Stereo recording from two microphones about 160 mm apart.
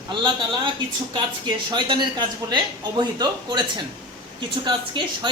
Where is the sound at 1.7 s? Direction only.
30° right (ahead or behind).